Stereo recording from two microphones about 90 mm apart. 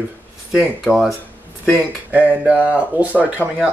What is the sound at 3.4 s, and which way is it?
Speech, 20° left (ahead or behind).